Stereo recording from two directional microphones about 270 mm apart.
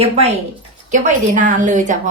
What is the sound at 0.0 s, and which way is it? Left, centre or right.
Speech, right.